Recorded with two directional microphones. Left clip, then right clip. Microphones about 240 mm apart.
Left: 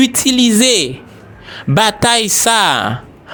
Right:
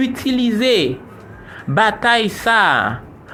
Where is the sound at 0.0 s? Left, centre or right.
Left.